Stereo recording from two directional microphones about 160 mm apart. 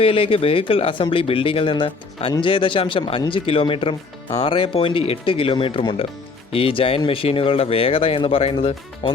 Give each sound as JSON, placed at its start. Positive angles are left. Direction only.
{"t": 0.0, "sound": "speech", "side_deg": 35}